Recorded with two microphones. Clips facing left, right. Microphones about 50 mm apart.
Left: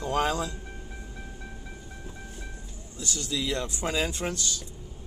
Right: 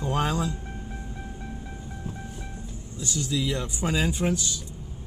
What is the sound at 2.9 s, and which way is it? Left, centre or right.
Speech, centre.